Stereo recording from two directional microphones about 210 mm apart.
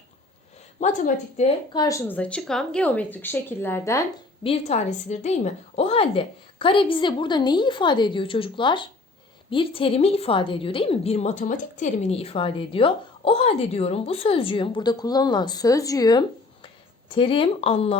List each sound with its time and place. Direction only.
0.8 s speech: 35° left (ahead or behind)
1.7 s speech: 15° left (ahead or behind)
4.4 s a woman's voice: 30° left (ahead or behind)